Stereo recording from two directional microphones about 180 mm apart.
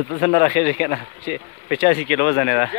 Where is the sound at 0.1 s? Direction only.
45° left (ahead or behind).